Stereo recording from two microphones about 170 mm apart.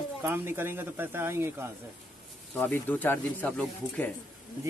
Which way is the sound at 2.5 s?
10° left (ahead or behind).